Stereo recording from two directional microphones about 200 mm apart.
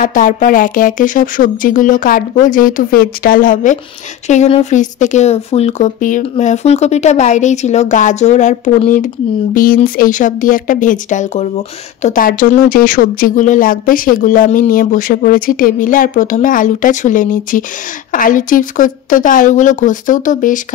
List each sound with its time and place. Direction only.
0.0 s speech: 40° left (ahead or behind)